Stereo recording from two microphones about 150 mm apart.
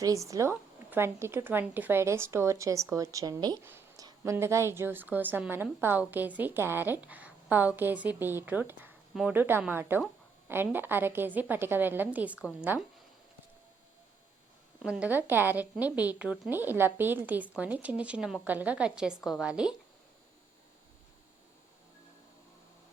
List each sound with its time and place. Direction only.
0.0 s a woman's voice: 20° right (ahead or behind)
3.6 s a sound: 15° right (ahead or behind)
4.0 s a woman's voice: 20° right (ahead or behind)
14.8 s a woman's voice: 5° right (ahead or behind)